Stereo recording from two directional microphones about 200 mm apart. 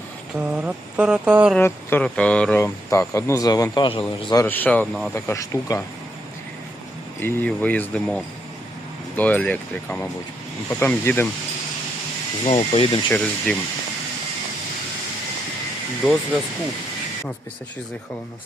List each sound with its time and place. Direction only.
0.3 s mantra: 5° right (ahead or behind)
1.5 s speech: 10° left (ahead or behind); by 4.0 s 25° left (ahead or behind)
4.3 s speech: 15° left (ahead or behind)
7.2 s speech: 10° left (ahead or behind)
12.5 s speech: 30° left (ahead or behind)
13.1 s speech: 5° left (ahead or behind)